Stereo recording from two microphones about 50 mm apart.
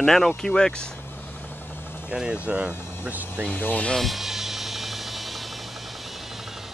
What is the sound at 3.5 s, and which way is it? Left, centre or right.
Speech, left.